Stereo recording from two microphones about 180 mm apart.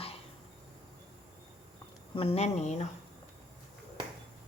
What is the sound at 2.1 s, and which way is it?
Speech, 35° left (ahead or behind).